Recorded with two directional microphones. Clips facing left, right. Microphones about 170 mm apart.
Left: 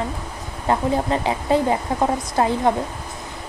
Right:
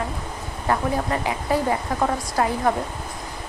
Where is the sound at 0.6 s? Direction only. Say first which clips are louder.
Left 3 dB; 25° left (ahead or behind).